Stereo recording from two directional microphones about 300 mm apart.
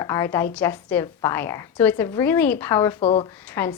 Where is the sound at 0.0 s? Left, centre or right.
Centre.